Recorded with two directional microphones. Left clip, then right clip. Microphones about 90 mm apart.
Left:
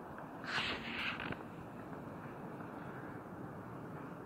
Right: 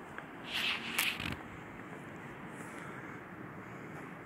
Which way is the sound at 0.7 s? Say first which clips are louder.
Right 6 dB; 20° right (ahead or behind).